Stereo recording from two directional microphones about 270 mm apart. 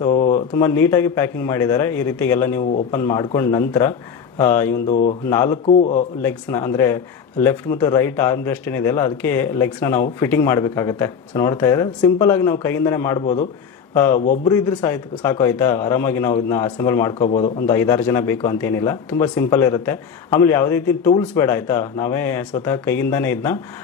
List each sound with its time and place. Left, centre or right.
0.3 s speech: centre
4.8 s a man's voice: left
5.3 s speech: centre
5.7 s a man's voice: left
6.2 s speech: centre